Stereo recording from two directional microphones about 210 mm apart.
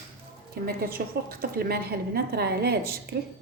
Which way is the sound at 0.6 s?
45° right (ahead or behind).